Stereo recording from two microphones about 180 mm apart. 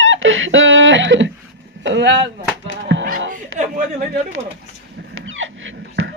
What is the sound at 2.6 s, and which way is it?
Music, 90° right.